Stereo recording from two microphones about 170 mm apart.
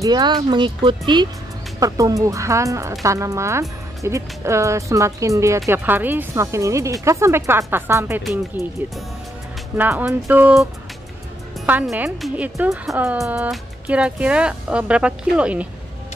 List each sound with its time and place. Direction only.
0.0 s speech: 25° right (ahead or behind)
8.6 s speech: centre (ahead or behind)
9.8 s speech: 10° right (ahead or behind)